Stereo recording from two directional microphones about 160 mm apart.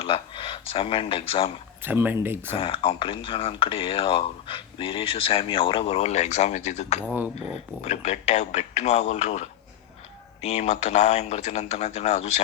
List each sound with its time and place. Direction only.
0.0 s speech: 35° left (ahead or behind)
1.8 s speech: 10° right (ahead or behind)
2.6 s speech: 35° left (ahead or behind)
7.0 s speech: 10° right (ahead or behind)
7.8 s speech: 45° left (ahead or behind)